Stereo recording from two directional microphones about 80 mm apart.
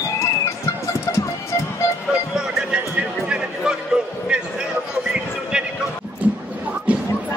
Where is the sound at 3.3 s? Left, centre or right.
Centre.